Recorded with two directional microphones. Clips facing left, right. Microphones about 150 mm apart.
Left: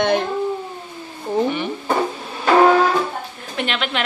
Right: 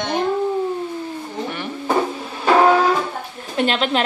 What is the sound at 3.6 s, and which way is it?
Speech, 35° right (ahead or behind).